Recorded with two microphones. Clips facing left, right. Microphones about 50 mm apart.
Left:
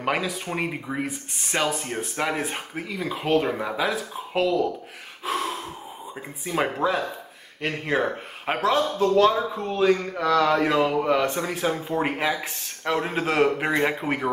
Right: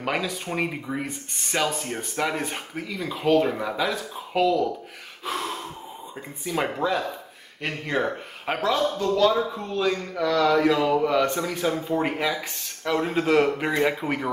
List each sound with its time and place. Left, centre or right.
0.0 s speech: centre
5.2 s gasp: centre
6.4 s speech: centre
9.1 s speech: left
10.9 s speech: centre
12.0 s speech: left